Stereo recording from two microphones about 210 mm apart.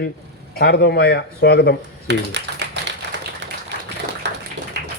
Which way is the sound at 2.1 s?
55° right (ahead or behind).